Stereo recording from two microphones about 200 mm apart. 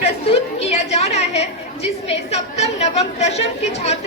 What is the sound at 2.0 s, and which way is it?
A woman's voice, 35° left (ahead or behind).